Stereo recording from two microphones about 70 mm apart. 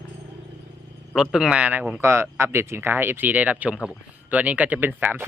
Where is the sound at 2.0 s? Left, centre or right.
Right.